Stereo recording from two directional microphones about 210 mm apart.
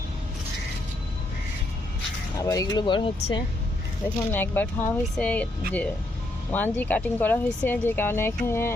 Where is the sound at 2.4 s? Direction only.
15° left (ahead or behind).